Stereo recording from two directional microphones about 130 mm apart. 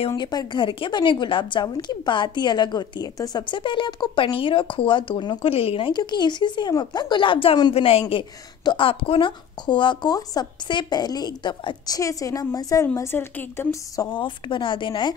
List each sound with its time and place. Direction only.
0.1 s a woman's voice: 30° left (ahead or behind)
14.1 s a woman's voice: 40° left (ahead or behind)